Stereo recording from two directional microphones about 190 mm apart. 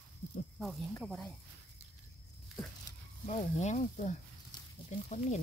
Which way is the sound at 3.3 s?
40° left (ahead or behind).